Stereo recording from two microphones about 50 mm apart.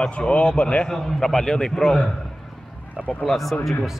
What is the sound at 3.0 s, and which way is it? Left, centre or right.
Speech, left.